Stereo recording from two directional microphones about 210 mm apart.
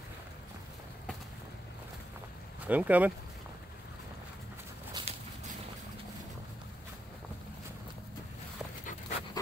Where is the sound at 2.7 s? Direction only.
5° right (ahead or behind).